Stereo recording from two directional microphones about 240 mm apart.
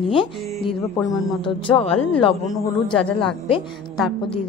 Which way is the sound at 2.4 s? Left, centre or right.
Centre.